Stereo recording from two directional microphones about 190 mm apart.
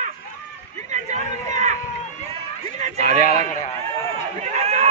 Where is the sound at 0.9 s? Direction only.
40° right (ahead or behind).